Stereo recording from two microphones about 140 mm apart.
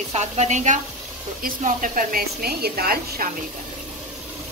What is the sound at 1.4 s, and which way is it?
A woman's voice, 75° right (ahead or behind).